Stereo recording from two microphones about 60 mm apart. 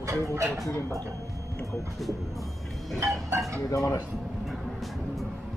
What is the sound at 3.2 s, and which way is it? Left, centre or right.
Speech, right.